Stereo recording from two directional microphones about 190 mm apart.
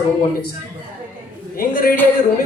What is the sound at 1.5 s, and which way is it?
Speech, 50° left (ahead or behind).